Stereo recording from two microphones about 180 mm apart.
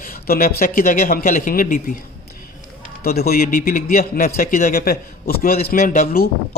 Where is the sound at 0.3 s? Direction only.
55° left (ahead or behind).